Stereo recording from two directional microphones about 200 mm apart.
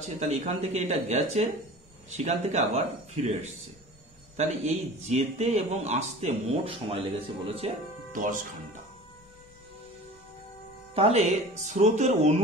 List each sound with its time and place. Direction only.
0.0 s a man's voice: 35° right (ahead or behind)
4.4 s a man's voice: 35° right (ahead or behind)
11.0 s a man's voice: 30° right (ahead or behind)